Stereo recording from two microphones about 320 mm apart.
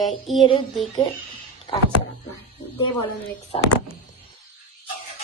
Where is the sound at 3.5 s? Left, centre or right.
Centre.